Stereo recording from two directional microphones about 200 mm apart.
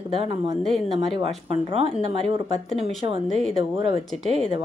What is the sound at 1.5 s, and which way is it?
Speech, 30° right (ahead or behind).